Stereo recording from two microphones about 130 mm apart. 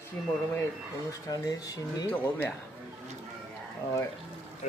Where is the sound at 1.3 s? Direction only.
30° left (ahead or behind).